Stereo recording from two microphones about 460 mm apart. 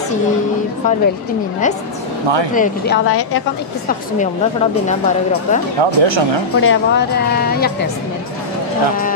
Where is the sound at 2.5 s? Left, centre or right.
Centre.